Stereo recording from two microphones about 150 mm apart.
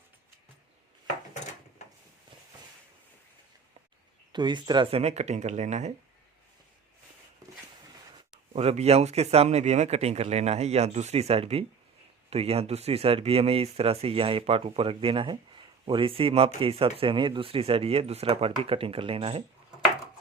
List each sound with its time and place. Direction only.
4.3 s speech: 30° right (ahead or behind); by 5.9 s 50° right (ahead or behind)
8.5 s speech: 45° right (ahead or behind)